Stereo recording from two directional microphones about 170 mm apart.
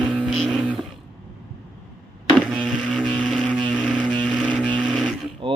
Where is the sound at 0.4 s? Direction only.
5° left (ahead or behind).